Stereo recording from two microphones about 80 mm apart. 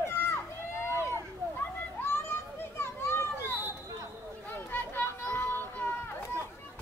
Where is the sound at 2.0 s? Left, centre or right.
Left.